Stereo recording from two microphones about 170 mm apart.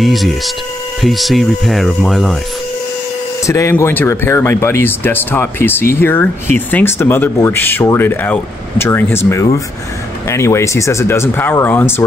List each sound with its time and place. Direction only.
0.0 s speech: centre (ahead or behind)
3.4 s speech: 15° left (ahead or behind)